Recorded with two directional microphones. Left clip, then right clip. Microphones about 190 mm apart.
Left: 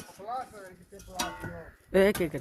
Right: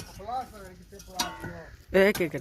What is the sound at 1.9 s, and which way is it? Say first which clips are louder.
Speech: right 2 dB; 5° left (ahead or behind).